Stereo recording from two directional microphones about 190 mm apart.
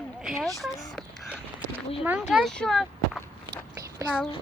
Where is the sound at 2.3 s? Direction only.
Centre (ahead or behind).